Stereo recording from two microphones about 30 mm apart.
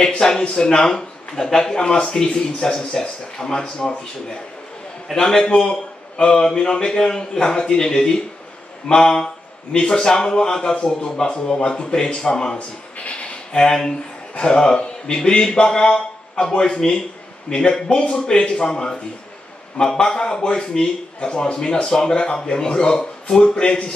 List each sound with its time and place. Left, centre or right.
0.2 s speech: left
1.3 s speech: centre
5.1 s a man's voice: left
12.5 s a sound: left
13.5 s speech: left
14.3 s a man's voice: left
17.5 s a man's voice: left
20.0 s a man's voice: left